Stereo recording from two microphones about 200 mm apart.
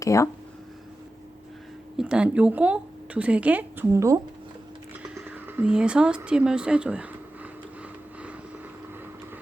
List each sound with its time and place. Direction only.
0.0 s speech: 15° left (ahead or behind)
2.0 s speech: 5° right (ahead or behind)
5.3 s speech: 10° right (ahead or behind)